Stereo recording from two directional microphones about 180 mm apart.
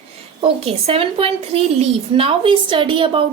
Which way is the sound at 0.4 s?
30° right (ahead or behind).